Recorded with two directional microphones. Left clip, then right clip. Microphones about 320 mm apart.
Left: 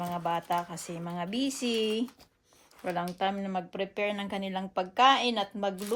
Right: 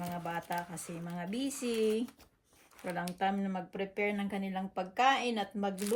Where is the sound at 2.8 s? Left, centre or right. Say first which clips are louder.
Left 4 dB; centre.